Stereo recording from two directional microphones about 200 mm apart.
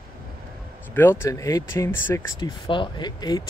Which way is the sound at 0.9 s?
10° left (ahead or behind).